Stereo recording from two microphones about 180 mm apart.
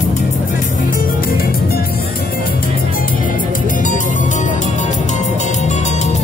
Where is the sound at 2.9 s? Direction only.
50° left (ahead or behind).